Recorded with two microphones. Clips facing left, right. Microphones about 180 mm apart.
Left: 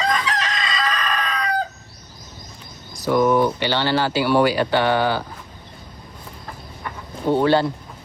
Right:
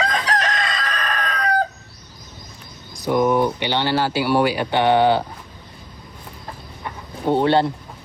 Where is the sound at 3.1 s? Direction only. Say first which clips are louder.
Left 1 dB; 15° right (ahead or behind).